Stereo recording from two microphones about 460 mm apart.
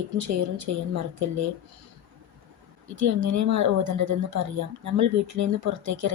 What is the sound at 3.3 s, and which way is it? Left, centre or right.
Speech, right.